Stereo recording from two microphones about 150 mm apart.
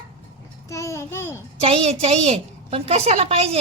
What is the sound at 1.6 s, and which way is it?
A woman's voice, 45° right (ahead or behind).